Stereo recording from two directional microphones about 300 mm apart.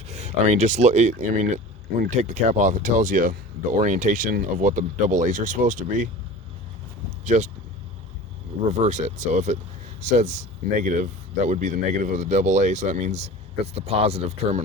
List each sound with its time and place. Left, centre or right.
0.1 s speech: right
7.3 s speech: right
8.7 s speech: right